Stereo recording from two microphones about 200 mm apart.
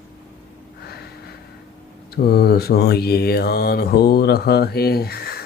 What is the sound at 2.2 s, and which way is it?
Mantra, 50° left (ahead or behind).